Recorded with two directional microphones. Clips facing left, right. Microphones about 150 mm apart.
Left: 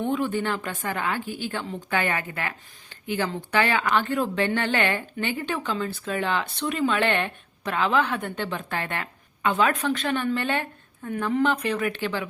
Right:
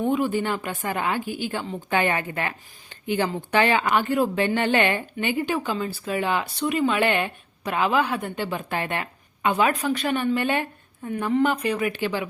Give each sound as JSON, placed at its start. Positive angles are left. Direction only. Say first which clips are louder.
{"t": 0.1, "sound": "a woman's voice", "louder": "right 2 dB", "side_deg": -15}
{"t": 2.0, "sound": "a woman's voice", "louder": "right 3 dB", "side_deg": -30}
{"t": 3.1, "sound": "a woman's voice", "louder": "right 3 dB", "side_deg": -15}
{"t": 9.7, "sound": "speech", "louder": "right 1 dB", "side_deg": 0}
{"t": 10.3, "sound": "a woman's voice", "louder": "right 3 dB", "side_deg": -15}